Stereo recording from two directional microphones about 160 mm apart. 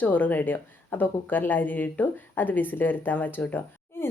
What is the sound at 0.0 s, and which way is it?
A woman's voice, 10° left (ahead or behind).